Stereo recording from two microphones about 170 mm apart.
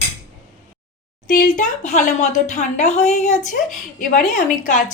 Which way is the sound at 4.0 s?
55° left (ahead or behind).